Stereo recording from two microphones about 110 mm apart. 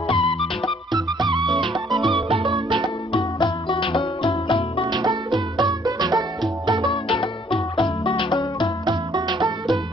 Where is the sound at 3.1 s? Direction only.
45° left (ahead or behind).